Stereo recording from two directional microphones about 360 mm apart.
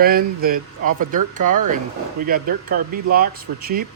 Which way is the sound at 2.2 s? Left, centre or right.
Right.